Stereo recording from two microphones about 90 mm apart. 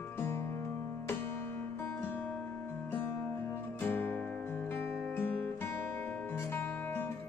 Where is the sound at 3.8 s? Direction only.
20° left (ahead or behind).